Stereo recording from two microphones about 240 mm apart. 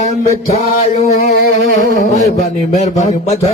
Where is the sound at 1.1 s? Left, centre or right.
Left.